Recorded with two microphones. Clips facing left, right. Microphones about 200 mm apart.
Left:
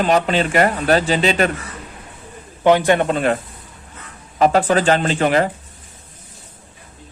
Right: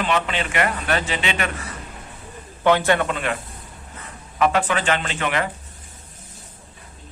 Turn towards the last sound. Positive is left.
turn(degrees=35)  # may be behind; listen again after turning